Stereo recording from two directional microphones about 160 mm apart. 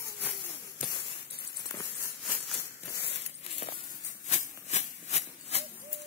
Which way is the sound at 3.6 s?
50° left (ahead or behind).